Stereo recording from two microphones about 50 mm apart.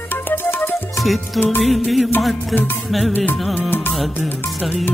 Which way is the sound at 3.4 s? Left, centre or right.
Centre.